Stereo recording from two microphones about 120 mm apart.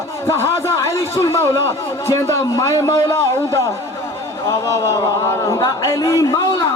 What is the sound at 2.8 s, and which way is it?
Speech, 25° left (ahead or behind).